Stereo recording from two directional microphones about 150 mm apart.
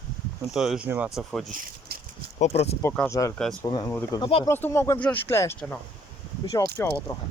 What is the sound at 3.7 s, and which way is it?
Speech, 25° left (ahead or behind).